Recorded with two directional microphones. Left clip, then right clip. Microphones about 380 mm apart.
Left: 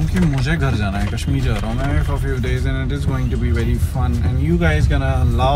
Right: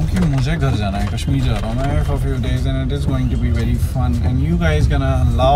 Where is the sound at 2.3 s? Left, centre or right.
Centre.